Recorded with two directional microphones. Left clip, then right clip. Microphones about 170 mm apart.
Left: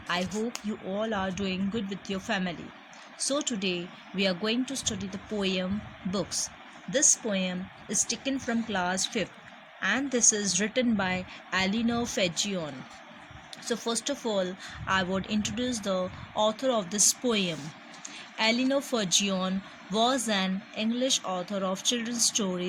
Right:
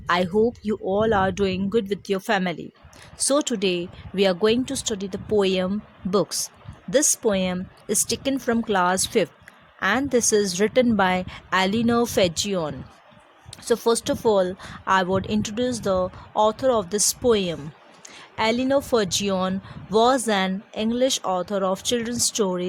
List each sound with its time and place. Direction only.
0.1 s speech: 60° right (ahead or behind)